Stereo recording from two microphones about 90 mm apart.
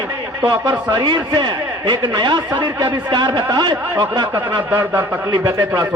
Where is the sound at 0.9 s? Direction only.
60° right (ahead or behind).